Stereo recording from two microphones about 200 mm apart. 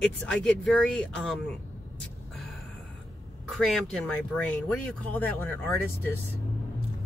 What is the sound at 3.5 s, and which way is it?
Speech, centre (ahead or behind).